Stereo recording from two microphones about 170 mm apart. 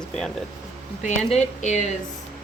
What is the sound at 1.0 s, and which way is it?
Speech, 40° left (ahead or behind).